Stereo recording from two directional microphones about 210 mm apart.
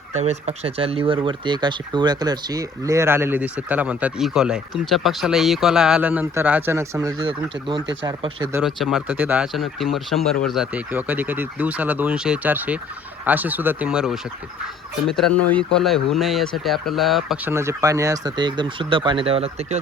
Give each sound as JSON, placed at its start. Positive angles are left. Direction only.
{"t": 0.1, "sound": "speech", "side_deg": -30}
{"t": 8.5, "sound": "speech", "side_deg": 0}
{"t": 17.5, "sound": "speech", "side_deg": -15}